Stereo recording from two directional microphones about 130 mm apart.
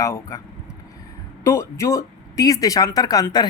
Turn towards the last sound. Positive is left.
turn(degrees=30)  # may be behind; listen again after turning